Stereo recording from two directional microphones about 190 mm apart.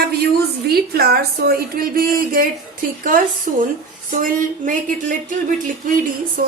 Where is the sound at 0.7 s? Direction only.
55° right (ahead or behind).